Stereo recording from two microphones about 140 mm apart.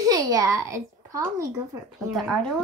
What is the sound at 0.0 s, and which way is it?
A child's voice, 25° right (ahead or behind).